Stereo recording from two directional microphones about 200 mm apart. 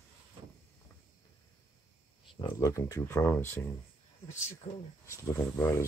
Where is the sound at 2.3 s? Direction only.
20° left (ahead or behind).